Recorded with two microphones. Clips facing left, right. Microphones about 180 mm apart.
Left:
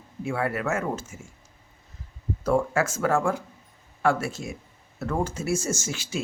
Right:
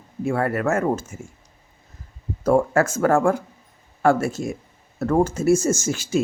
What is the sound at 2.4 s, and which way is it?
Speech, 45° right (ahead or behind).